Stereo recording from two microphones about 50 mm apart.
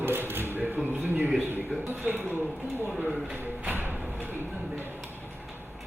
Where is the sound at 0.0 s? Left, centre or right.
Right.